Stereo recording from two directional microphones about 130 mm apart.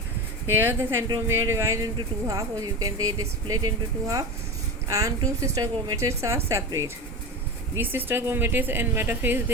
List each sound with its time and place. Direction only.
0.5 s speech: 15° right (ahead or behind)
7.9 s speech: 15° right (ahead or behind)